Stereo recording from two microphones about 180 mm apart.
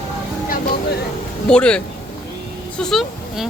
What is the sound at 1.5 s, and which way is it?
Speech, 5° left (ahead or behind).